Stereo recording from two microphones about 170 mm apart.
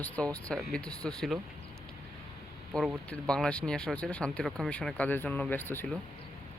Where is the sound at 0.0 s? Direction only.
5° left (ahead or behind).